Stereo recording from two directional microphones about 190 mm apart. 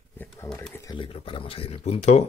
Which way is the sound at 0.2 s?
10° left (ahead or behind).